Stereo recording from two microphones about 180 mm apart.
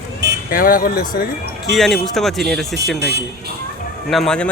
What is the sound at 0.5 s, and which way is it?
Speech, 50° left (ahead or behind).